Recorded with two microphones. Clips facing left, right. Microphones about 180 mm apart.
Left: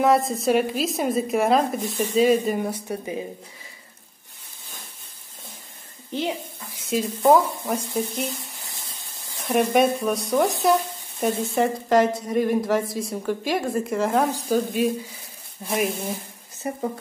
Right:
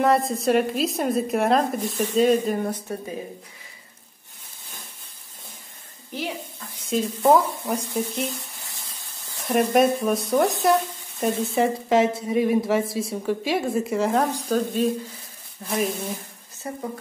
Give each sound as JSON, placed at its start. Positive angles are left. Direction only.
{"t": 0.0, "sound": "sizzle", "side_deg": 0}
{"t": 6.9, "sound": "sizzle", "side_deg": 0}
{"t": 9.4, "sound": "sizzle", "side_deg": 0}
{"t": 16.6, "sound": "speech", "side_deg": 20}